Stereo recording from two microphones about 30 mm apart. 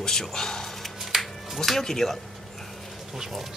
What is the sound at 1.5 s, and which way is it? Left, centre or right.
Speech, centre.